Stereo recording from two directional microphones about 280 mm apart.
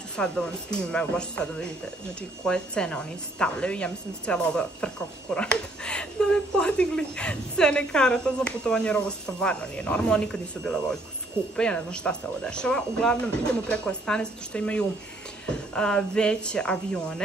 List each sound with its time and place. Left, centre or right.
0.2 s a woman's voice: centre